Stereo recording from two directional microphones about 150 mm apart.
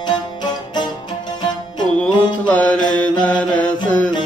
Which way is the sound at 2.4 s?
10° left (ahead or behind).